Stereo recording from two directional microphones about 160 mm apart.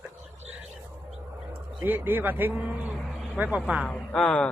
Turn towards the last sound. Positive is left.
turn(degrees=5)  # may be behind; listen again after turning